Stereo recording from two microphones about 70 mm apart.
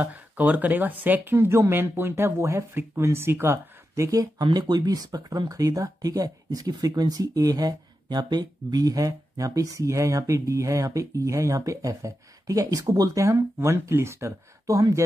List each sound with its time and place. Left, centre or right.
0.0 s speech: right
3.9 s speech: right
4.4 s speech: right
13.2 s speech: right
14.7 s speech: right